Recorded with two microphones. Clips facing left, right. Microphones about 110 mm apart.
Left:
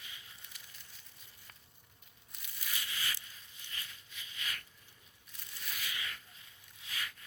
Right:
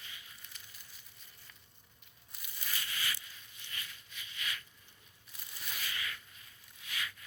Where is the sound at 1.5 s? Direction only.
50° left (ahead or behind).